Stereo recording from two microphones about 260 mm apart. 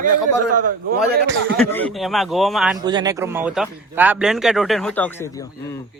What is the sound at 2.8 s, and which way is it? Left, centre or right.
Speech, centre.